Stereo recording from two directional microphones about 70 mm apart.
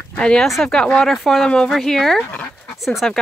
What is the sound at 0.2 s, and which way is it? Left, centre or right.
Speech, centre.